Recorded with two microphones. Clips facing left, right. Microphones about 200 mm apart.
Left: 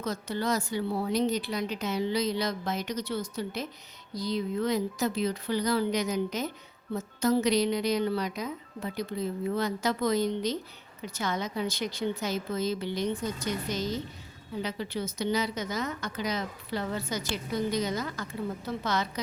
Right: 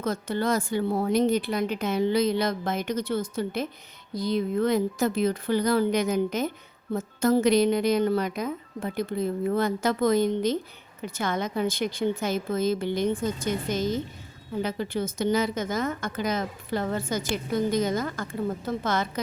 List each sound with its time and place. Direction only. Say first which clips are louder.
0.0 s a woman's voice: right 4 dB; 55° right (ahead or behind)